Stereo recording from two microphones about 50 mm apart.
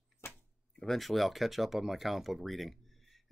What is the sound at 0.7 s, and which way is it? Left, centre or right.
Speech, centre.